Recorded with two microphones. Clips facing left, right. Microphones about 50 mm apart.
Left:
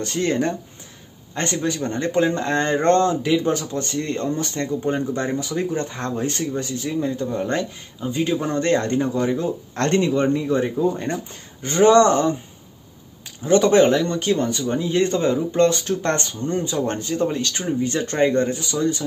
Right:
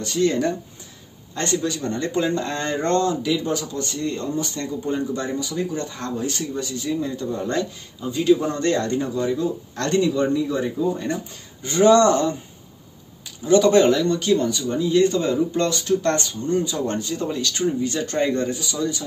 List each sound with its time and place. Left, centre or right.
0.0 s speech: left
13.5 s speech: left